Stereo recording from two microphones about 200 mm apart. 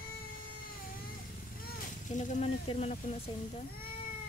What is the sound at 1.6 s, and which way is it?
Speech, 40° left (ahead or behind).